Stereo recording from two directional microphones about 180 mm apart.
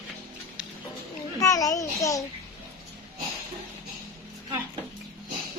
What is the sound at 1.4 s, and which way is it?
Speech, 20° left (ahead or behind).